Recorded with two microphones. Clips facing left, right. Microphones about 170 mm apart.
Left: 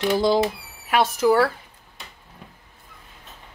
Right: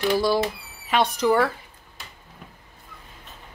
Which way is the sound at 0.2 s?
20° left (ahead or behind).